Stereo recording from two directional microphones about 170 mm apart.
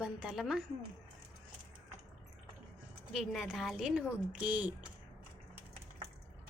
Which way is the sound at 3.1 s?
Centre (ahead or behind).